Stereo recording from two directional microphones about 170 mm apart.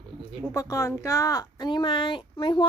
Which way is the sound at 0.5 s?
20° left (ahead or behind).